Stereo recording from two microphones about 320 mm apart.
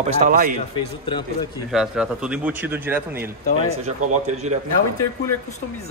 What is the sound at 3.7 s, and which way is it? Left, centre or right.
Speech, right.